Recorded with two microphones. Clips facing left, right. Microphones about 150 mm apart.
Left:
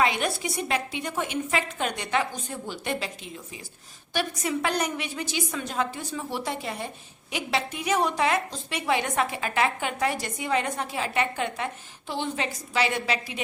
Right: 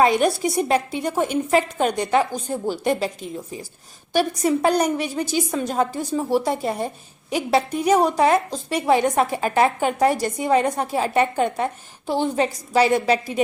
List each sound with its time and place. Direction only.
0.0 s a woman's voice: 40° right (ahead or behind)